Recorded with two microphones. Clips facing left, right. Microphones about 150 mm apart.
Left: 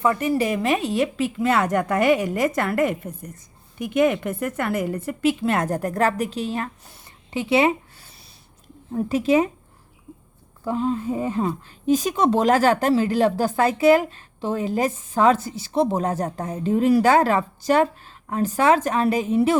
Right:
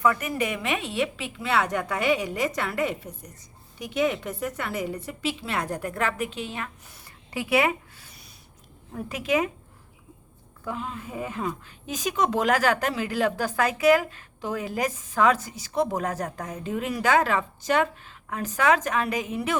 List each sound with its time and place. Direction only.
0.0 s a woman's voice: 30° left (ahead or behind)
7.3 s a sound: 25° left (ahead or behind)
8.9 s a woman's voice: 30° left (ahead or behind)
10.6 s speech: 30° left (ahead or behind)